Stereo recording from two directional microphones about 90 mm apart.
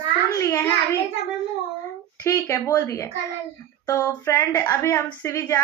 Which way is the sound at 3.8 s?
35° left (ahead or behind).